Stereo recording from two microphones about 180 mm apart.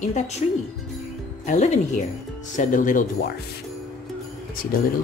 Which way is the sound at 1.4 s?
40° left (ahead or behind).